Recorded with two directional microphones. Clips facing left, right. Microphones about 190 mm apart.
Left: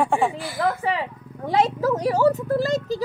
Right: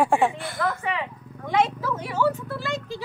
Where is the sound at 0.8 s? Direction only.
35° left (ahead or behind).